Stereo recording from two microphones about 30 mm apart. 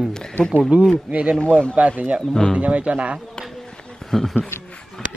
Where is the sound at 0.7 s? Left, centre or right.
Right.